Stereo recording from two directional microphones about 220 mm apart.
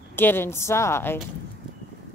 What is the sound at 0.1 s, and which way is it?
Speech, 10° left (ahead or behind).